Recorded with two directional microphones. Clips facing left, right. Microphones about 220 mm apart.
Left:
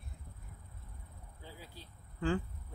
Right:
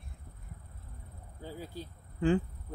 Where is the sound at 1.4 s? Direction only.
45° right (ahead or behind).